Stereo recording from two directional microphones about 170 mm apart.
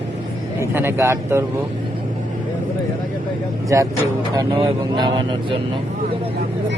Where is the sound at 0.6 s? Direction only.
15° right (ahead or behind).